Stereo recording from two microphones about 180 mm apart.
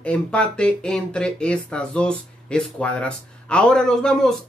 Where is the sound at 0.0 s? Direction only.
5° left (ahead or behind).